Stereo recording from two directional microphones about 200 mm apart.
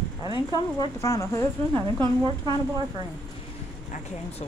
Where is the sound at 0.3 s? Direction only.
20° left (ahead or behind).